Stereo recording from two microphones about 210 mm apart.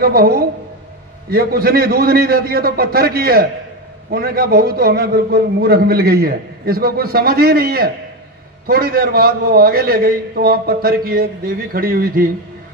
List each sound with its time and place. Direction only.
0.0 s a man's voice: 45° right (ahead or behind)